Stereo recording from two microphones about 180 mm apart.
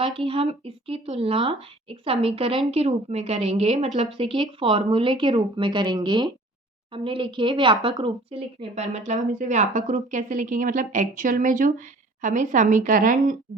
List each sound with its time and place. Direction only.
0.0 s a woman's voice: 30° right (ahead or behind); by 13.3 s 50° right (ahead or behind)